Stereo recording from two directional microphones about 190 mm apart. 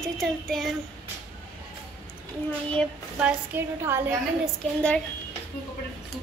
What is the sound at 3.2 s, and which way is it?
Speech, 10° right (ahead or behind).